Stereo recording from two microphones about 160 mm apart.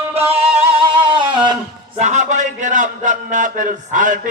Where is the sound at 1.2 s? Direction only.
30° right (ahead or behind).